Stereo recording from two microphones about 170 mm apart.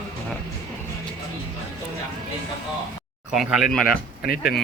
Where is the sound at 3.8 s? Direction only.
60° left (ahead or behind).